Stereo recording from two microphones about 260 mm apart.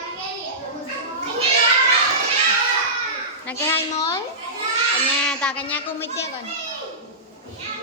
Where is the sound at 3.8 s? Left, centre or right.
Centre.